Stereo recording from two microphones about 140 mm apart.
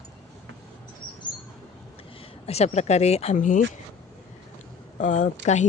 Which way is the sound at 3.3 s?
70° left (ahead or behind).